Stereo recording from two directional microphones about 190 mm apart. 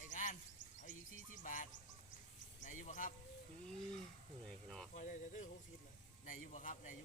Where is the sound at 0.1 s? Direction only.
40° left (ahead or behind).